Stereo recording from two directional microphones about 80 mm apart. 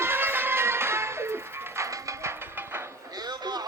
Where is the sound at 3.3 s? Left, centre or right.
Right.